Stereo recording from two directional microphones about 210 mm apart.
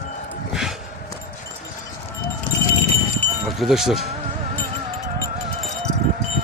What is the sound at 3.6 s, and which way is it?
Speech, centre (ahead or behind).